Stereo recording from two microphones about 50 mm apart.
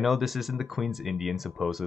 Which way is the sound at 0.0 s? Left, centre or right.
Centre.